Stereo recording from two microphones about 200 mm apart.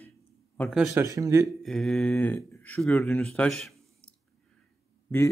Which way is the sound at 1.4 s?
Centre (ahead or behind).